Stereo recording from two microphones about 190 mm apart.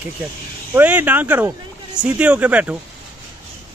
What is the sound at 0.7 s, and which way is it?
Speech, 10° right (ahead or behind).